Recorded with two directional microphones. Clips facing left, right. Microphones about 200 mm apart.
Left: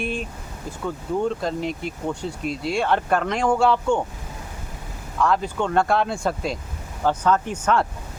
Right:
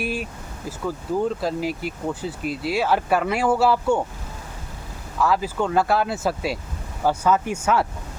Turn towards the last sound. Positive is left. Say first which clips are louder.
# even
turn(degrees=-10)  # may be behind; listen again after turning